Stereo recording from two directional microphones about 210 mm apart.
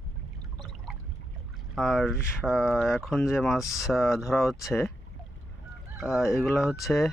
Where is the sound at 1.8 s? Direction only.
Centre (ahead or behind).